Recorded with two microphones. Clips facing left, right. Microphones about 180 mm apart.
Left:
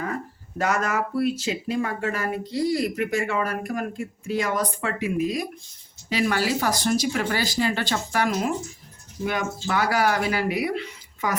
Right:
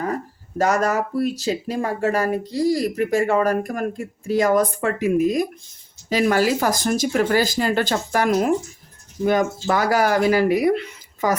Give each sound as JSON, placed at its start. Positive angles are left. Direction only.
{"t": 0.6, "sound": "speech", "side_deg": -40}